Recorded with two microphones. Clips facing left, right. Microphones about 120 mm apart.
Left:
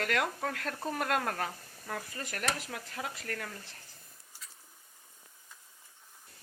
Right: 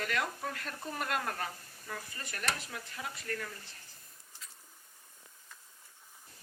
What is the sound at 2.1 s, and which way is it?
Speech, 90° left.